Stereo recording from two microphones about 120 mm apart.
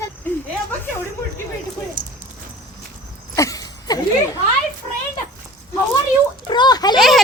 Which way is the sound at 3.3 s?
30° left (ahead or behind).